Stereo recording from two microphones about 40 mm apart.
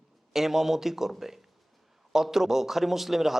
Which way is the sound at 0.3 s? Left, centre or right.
Centre.